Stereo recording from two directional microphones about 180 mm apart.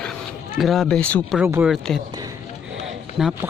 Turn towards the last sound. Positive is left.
turn(degrees=0)  # may be behind; listen again after turning